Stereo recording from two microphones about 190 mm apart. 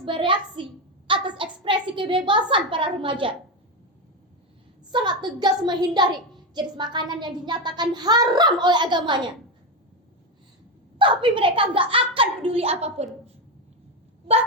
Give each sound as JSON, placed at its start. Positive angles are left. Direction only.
{"t": 0.0, "sound": "a child's voice", "side_deg": -25}
{"t": 4.9, "sound": "a child's voice", "side_deg": -25}
{"t": 10.9, "sound": "a child's voice", "side_deg": -25}